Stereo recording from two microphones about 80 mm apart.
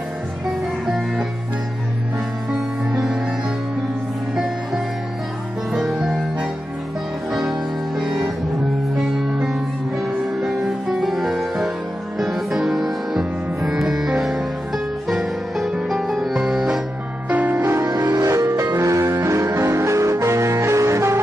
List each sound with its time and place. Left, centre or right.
2.9 s music: centre
5.7 s music: centre
8.9 s music: centre
17.3 s music: centre
17.7 s music: right